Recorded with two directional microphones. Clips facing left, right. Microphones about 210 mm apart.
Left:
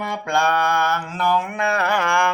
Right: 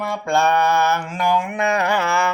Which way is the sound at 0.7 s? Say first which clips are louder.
Right 3 dB; 5° right (ahead or behind).